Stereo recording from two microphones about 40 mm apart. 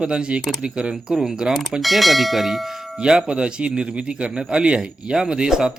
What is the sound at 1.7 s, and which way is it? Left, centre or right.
Speech, centre.